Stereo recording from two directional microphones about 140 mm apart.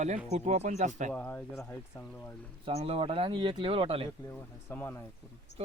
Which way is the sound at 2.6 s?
45° right (ahead or behind).